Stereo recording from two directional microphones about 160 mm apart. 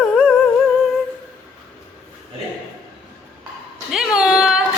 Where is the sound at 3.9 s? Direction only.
5° right (ahead or behind).